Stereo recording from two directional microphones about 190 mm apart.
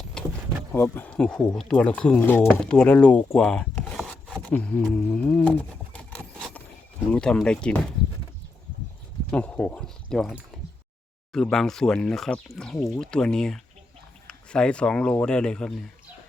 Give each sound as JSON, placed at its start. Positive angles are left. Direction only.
{"t": 0.2, "sound": "vehicle", "side_deg": 5}
{"t": 0.7, "sound": "speech", "side_deg": 10}
{"t": 4.4, "sound": "a sound", "side_deg": 5}
{"t": 7.1, "sound": "speech", "side_deg": 5}
{"t": 9.3, "sound": "speech", "side_deg": 5}